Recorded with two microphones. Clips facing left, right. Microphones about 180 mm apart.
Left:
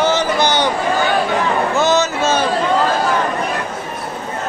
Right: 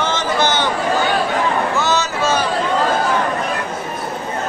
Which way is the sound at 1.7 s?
20° left (ahead or behind).